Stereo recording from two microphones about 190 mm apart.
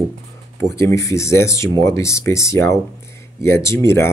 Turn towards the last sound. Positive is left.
turn(degrees=15)  # may be behind; listen again after turning